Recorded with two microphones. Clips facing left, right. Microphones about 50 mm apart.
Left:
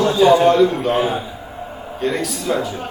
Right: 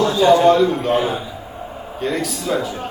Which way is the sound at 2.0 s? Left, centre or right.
Centre.